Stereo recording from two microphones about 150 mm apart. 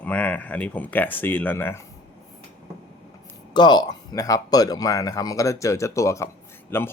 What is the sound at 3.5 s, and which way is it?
Speech, 30° left (ahead or behind).